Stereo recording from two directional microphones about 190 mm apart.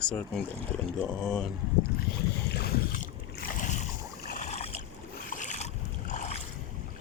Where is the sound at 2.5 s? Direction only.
55° left (ahead or behind).